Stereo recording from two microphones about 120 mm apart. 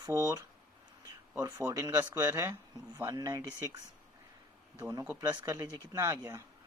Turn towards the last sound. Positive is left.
turn(degrees=-25)  # may be behind; listen again after turning